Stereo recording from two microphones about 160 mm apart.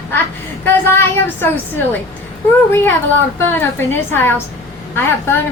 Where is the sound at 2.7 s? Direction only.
10° left (ahead or behind).